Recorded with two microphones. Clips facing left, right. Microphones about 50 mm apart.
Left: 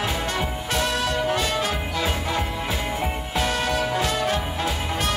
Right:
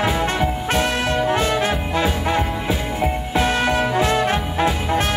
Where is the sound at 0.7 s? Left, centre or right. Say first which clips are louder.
Right 2 dB; right.